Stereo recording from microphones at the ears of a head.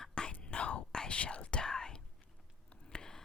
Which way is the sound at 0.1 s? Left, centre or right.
Left.